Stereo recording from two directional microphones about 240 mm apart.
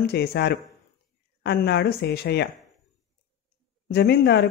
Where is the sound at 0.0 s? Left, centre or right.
Left.